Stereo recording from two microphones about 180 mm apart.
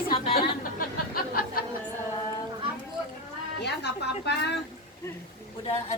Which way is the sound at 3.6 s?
70° left (ahead or behind).